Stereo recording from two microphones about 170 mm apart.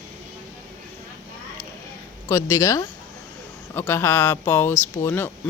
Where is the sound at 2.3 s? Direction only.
15° left (ahead or behind).